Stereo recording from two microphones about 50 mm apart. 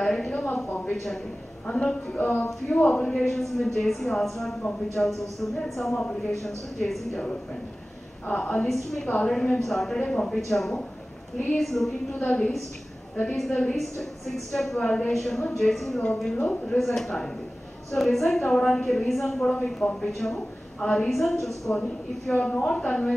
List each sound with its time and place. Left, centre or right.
0.0 s a sound: centre
0.7 s a sound: left
0.9 s speech: centre
1.7 s a woman's voice: centre
2.1 s a woman's voice: left
3.1 s a woman's voice: centre
8.3 s a woman's voice: left
8.6 s a woman's voice: centre
9.9 s a woman's voice: centre
12.3 s a woman's voice: centre
20.1 s a woman's voice: centre